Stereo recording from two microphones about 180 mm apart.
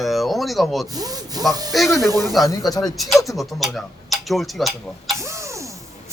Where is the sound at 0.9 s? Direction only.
20° right (ahead or behind).